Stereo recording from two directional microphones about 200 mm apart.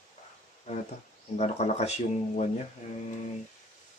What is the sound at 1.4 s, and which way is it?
Mantra, 30° left (ahead or behind).